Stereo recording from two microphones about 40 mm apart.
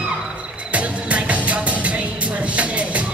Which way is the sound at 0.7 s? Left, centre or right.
Right.